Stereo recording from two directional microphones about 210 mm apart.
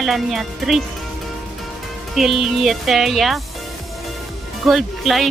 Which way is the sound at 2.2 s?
Centre (ahead or behind).